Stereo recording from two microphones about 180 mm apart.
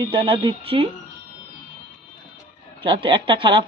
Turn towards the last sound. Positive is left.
turn(degrees=-25)  # may be behind; listen again after turning